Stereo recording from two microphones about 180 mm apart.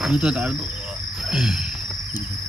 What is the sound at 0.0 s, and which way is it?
Cricket, 5° right (ahead or behind).